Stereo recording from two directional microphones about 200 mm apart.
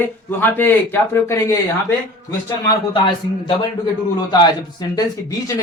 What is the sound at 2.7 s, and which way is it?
Speech, 25° left (ahead or behind).